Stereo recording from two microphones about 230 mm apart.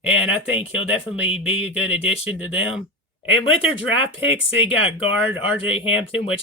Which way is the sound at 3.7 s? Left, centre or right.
Left.